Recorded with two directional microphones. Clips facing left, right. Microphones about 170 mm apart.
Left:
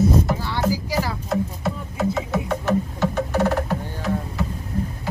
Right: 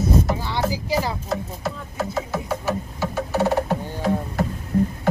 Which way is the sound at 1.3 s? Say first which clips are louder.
Left 3 dB; centre (ahead or behind).